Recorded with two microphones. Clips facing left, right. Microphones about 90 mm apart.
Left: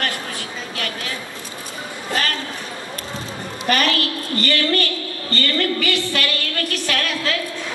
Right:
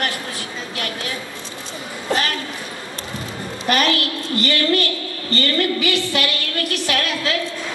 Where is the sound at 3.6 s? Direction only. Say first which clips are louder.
Right 1 dB; 20° right (ahead or behind).